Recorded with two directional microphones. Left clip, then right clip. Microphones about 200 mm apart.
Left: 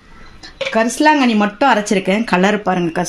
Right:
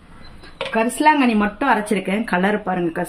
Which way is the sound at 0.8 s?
50° left (ahead or behind).